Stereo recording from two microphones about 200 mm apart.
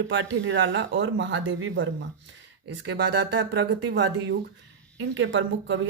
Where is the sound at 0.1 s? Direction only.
65° right (ahead or behind).